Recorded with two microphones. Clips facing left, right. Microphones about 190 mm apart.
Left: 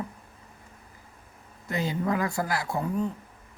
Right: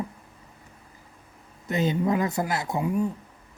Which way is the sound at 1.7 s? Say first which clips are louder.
Right 4 dB; 20° right (ahead or behind).